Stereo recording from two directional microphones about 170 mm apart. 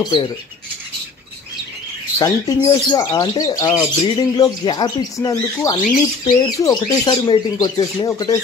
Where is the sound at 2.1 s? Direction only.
20° left (ahead or behind).